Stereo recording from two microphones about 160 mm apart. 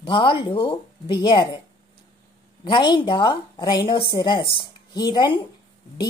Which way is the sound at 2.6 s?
30° left (ahead or behind).